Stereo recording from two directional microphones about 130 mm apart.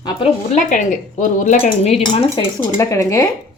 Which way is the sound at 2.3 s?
25° left (ahead or behind).